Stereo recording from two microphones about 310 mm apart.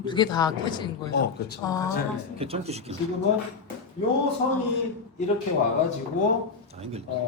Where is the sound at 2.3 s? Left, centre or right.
Centre.